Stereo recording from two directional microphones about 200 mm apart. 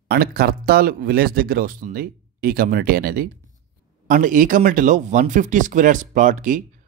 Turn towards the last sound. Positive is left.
turn(degrees=-40)  # may be behind; listen again after turning